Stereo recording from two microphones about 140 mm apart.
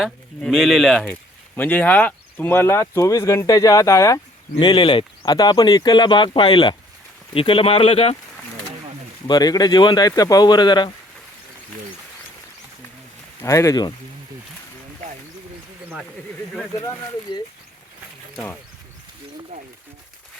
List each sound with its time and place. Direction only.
0.0 s speech: centre (ahead or behind); by 4.2 s 20° left (ahead or behind)
4.6 s speech: 30° left (ahead or behind)
9.2 s speech: 30° left (ahead or behind)
13.4 s speech: 20° left (ahead or behind)